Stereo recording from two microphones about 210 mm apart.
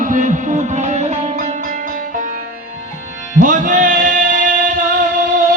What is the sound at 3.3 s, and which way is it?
Music, 40° right (ahead or behind).